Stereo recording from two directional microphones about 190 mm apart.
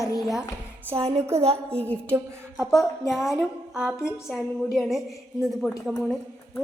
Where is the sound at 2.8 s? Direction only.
Centre (ahead or behind).